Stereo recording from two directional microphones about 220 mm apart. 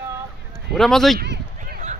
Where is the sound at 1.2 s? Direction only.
40° right (ahead or behind).